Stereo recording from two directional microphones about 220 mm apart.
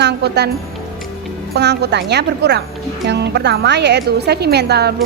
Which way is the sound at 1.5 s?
50° right (ahead or behind).